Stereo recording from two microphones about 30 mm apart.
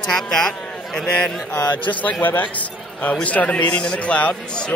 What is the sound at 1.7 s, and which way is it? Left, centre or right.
A man's voice, left.